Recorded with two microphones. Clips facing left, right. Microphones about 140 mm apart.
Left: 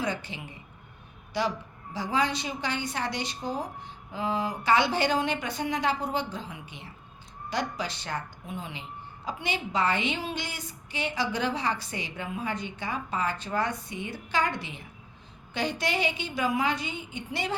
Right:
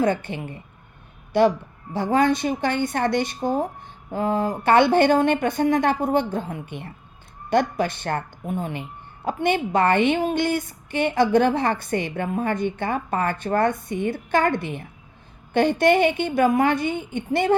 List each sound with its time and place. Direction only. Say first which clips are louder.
0.0 s a woman's voice: right 10 dB; 55° right (ahead or behind)